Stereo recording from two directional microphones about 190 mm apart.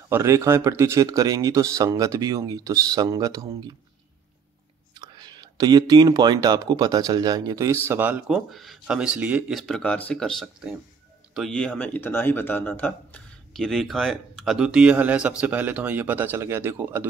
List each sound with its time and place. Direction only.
0.1 s speech: 15° right (ahead or behind)
4.9 s speech: 20° right (ahead or behind)